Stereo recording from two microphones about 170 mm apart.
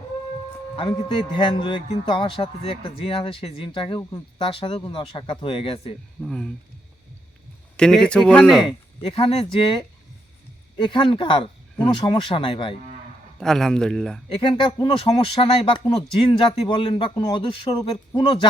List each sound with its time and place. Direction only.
0.8 s speech: 30° left (ahead or behind)
6.2 s speech: 5° left (ahead or behind)
7.8 s speech: 5° left (ahead or behind)
9.0 s speech: 35° left (ahead or behind)
13.4 s speech: 5° left (ahead or behind)
14.3 s speech: 30° left (ahead or behind)